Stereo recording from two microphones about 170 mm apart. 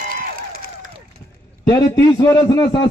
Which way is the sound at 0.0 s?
55° right (ahead or behind).